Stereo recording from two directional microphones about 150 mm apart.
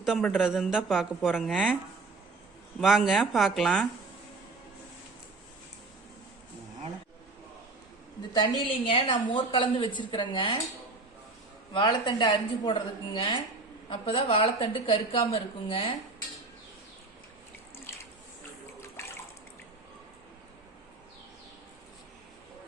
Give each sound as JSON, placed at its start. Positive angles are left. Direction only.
{"t": 0.0, "sound": "speech", "side_deg": 0}
{"t": 2.8, "sound": "speech", "side_deg": 0}
{"t": 8.3, "sound": "a woman's voice", "side_deg": 35}
{"t": 11.7, "sound": "a woman's voice", "side_deg": 30}